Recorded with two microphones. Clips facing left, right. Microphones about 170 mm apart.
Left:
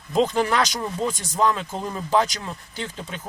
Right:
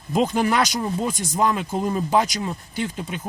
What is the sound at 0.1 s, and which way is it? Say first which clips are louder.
Speech: even; 10° right (ahead or behind).